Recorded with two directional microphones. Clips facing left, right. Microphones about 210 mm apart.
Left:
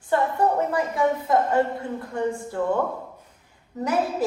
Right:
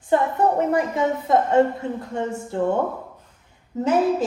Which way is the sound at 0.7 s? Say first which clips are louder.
Right 2 dB; 25° right (ahead or behind).